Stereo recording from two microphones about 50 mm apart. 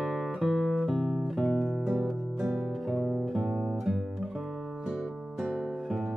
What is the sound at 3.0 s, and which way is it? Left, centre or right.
Music, centre.